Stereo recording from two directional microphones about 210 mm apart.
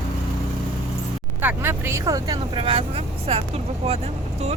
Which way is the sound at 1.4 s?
10° right (ahead or behind).